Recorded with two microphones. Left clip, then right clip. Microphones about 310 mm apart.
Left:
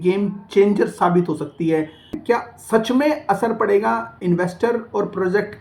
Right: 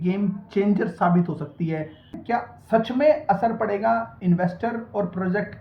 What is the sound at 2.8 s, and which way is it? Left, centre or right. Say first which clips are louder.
Speech: left 1 dB; centre.